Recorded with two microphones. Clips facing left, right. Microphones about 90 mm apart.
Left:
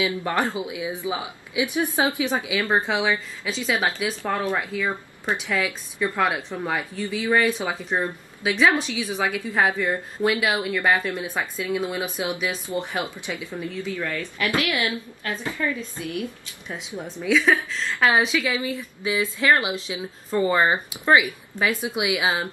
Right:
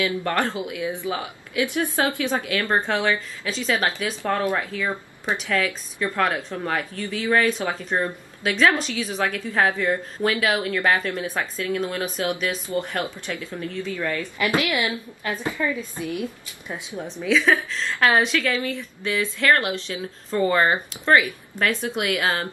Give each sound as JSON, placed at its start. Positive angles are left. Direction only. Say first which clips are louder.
{"t": 0.0, "sound": "a woman's voice", "louder": "even", "side_deg": 15}
{"t": 14.1, "sound": "a woman's voice", "louder": "right 2 dB", "side_deg": -15}
{"t": 17.2, "sound": "a woman's voice", "louder": "even", "side_deg": 5}